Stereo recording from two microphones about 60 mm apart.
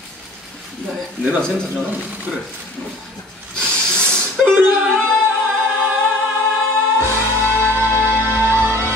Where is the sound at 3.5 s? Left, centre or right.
Centre.